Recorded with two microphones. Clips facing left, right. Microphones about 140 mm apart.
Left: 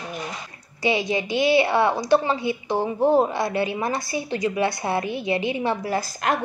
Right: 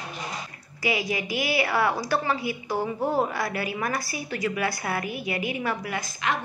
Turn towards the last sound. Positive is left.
turn(degrees=40)  # may be behind; listen again after turning